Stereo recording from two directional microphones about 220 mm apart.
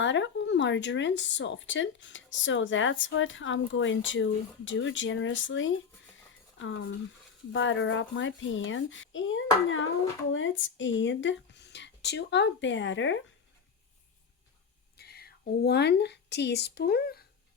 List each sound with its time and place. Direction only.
0.0 s speech: 55° left (ahead or behind)
14.9 s a woman's voice: 45° left (ahead or behind)